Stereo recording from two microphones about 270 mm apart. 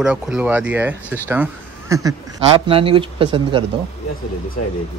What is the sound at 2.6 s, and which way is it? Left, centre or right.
Speech, centre.